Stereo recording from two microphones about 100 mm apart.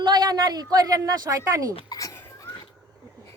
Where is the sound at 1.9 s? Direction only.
35° left (ahead or behind).